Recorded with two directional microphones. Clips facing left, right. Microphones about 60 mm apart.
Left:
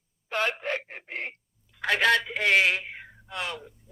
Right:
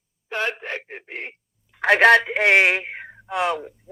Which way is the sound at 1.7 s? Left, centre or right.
Right.